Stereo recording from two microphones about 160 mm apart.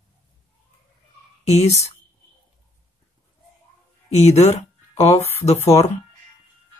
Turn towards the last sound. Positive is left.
turn(degrees=40)  # may be behind; listen again after turning